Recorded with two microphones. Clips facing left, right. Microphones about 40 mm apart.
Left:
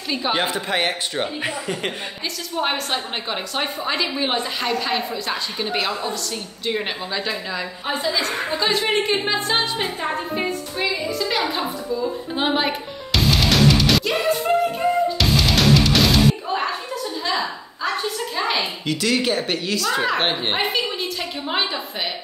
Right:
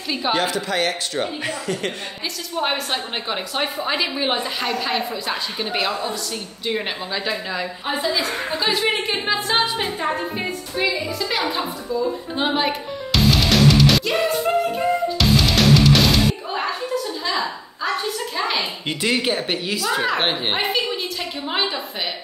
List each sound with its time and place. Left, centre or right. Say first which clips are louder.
0.3 s speech: right 1 dB; left
2.5 s a woman's voice: even; centre
7.2 s a woman's voice: right 1 dB; centre
11.1 s a sound: even; centre
18.9 s speech: even; right
19.1 s a woman's voice: left 1 dB; centre